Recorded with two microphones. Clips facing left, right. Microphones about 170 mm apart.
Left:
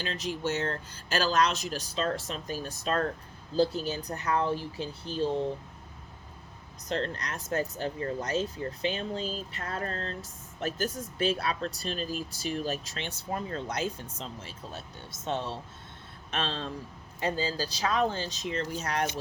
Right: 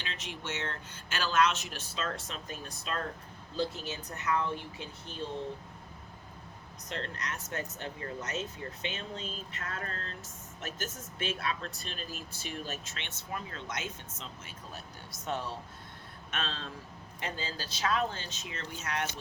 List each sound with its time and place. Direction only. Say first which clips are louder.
0.0 s speech: left 9 dB; 40° left (ahead or behind)
6.8 s speech: left 7 dB; 35° left (ahead or behind)